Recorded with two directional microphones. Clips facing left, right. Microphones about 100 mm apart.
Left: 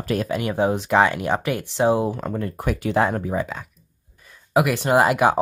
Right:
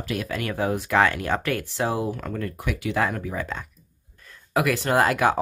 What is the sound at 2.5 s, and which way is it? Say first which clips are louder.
Speech: left 6 dB; 40° left (ahead or behind).